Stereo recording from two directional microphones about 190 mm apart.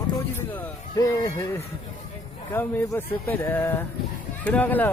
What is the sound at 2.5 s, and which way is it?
Speech, 10° left (ahead or behind).